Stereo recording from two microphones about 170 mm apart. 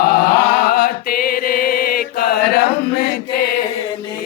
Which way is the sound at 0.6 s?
60° left (ahead or behind).